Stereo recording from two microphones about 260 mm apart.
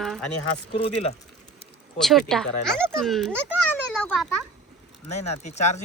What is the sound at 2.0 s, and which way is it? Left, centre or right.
Speech, centre.